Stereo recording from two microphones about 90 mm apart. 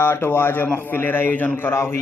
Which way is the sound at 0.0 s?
25° left (ahead or behind).